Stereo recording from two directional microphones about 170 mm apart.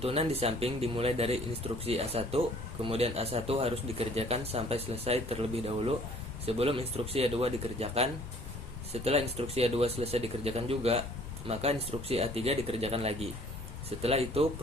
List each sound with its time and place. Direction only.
0.0 s speech: 35° right (ahead or behind)